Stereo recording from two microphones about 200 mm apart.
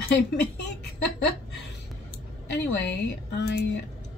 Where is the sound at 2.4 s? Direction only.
60° left (ahead or behind).